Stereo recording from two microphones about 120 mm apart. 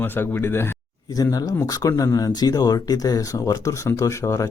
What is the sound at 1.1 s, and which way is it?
Speech, 30° left (ahead or behind).